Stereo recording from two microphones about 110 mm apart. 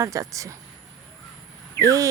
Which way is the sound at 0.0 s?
30° right (ahead or behind).